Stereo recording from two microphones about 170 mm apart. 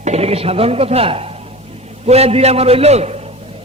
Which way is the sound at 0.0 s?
40° right (ahead or behind).